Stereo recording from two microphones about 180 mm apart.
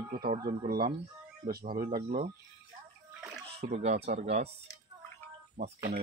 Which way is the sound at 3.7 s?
35° right (ahead or behind).